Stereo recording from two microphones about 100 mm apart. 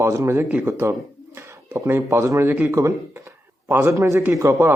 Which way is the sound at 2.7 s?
30° right (ahead or behind).